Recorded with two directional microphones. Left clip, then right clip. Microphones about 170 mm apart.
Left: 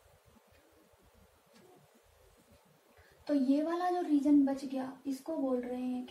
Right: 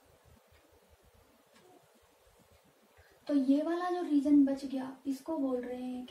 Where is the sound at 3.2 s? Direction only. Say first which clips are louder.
Right 1 dB; 10° right (ahead or behind).